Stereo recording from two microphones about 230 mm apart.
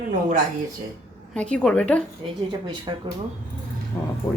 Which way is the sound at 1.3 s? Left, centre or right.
Centre.